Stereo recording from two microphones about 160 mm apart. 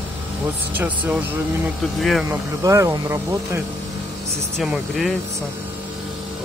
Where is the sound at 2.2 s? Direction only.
20° right (ahead or behind).